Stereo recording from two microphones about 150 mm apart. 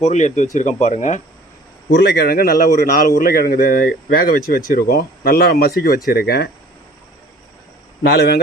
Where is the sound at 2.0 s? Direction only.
90° left.